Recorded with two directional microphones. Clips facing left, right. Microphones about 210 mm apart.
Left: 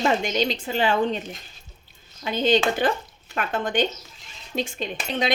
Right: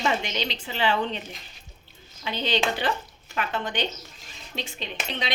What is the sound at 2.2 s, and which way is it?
A woman's voice, 45° left (ahead or behind).